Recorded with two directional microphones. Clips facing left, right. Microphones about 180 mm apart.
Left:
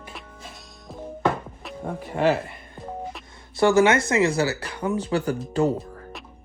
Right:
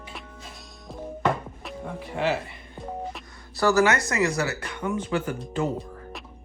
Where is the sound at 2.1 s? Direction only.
50° left (ahead or behind).